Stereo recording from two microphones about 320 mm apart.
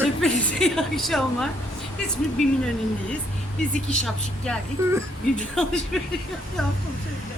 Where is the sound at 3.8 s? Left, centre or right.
Centre.